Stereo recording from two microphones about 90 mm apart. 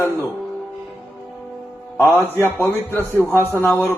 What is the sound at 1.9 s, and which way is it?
A man's voice, 25° left (ahead or behind).